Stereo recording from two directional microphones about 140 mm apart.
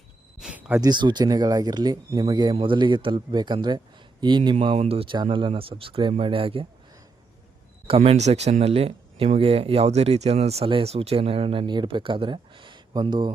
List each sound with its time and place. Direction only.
0.3 s a sound: 10° right (ahead or behind)
0.8 s speech: 30° right (ahead or behind)
7.9 s speech: 45° right (ahead or behind)